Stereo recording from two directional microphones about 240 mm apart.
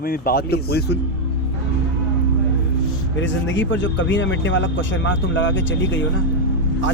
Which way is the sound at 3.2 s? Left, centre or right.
Left.